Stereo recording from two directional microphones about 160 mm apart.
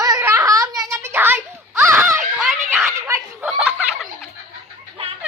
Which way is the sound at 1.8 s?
15° right (ahead or behind).